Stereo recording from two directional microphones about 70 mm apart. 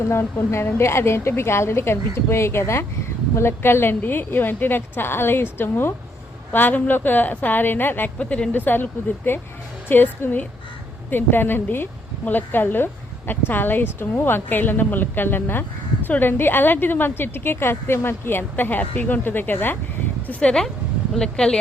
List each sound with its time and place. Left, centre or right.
0.1 s a woman's voice: left
8.2 s a woman's voice: centre
20.2 s speech: centre